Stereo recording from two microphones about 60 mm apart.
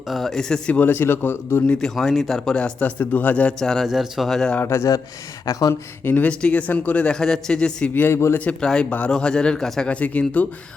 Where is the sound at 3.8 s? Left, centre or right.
Centre.